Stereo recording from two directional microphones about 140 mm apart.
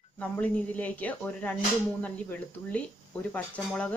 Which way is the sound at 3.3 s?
10° left (ahead or behind).